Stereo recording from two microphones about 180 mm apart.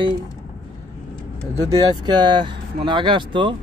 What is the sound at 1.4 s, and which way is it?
A man's voice, 20° right (ahead or behind).